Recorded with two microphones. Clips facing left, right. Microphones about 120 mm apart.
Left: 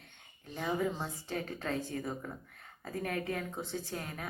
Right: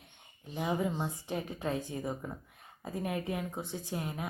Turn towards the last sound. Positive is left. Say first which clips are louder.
# right 3 dB
turn(degrees=-15)  # may be behind; listen again after turning